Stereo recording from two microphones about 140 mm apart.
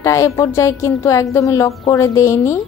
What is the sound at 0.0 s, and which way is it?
Speech, 20° left (ahead or behind).